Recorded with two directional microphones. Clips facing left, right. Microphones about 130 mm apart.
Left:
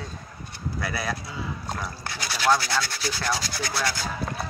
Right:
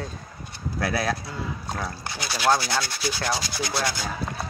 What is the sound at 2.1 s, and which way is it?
Rub, 20° right (ahead or behind).